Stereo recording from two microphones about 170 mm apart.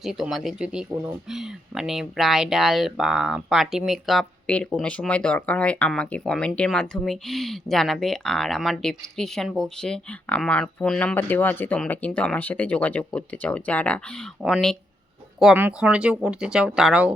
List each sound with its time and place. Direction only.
0.0 s speech: centre (ahead or behind)